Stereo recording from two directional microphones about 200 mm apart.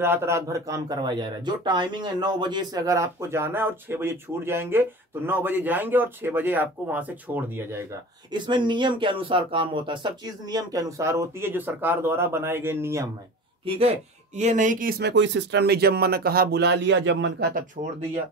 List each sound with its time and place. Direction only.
0.0 s speech: 10° right (ahead or behind)
13.7 s speech: 30° right (ahead or behind); by 17.5 s 65° right (ahead or behind)
17.8 s speech: 35° right (ahead or behind)